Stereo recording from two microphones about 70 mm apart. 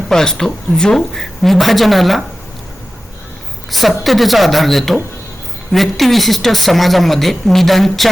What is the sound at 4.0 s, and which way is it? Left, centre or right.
Speech, centre.